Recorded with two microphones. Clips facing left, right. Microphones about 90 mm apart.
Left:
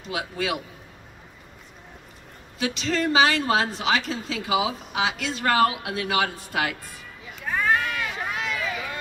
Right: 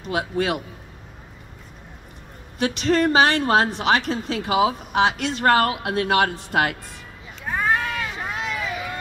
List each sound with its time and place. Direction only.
0.1 s a woman's voice: 45° right (ahead or behind)
2.6 s a woman's voice: 50° right (ahead or behind)
7.4 s cat: 25° right (ahead or behind)